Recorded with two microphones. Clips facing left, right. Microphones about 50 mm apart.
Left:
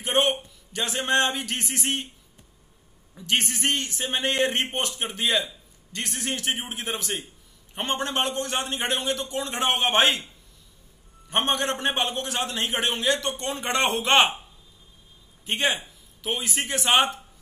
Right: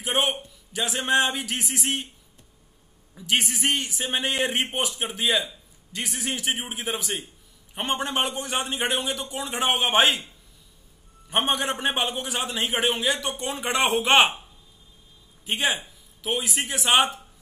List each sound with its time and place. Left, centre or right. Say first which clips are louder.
0.0 s a man's voice: left 2 dB; centre
3.2 s a man's voice: right 1 dB; centre
11.2 s a man's voice: even; centre
15.4 s a man's voice: even; centre